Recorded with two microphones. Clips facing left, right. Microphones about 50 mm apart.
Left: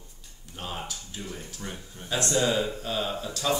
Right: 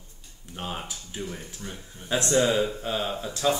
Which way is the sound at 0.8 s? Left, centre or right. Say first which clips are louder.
Right 3 dB; right.